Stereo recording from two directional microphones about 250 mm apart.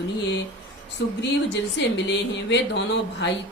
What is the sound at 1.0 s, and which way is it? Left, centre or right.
Speech, left.